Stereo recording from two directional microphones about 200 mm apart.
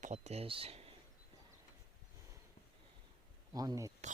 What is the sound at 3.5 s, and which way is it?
Speech, 20° right (ahead or behind).